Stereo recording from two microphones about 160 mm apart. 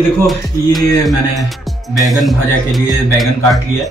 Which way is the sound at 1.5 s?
Centre (ahead or behind).